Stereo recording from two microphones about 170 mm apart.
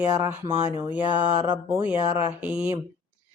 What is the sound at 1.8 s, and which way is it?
Speech, 35° left (ahead or behind).